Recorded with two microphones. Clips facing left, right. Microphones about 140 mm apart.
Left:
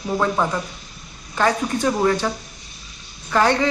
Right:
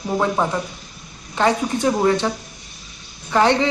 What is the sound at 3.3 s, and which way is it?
Speech, 25° right (ahead or behind).